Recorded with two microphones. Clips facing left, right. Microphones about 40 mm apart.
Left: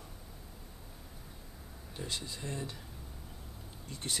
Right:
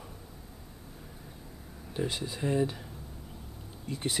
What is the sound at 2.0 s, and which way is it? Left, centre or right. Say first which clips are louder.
Speech: right 7 dB; centre.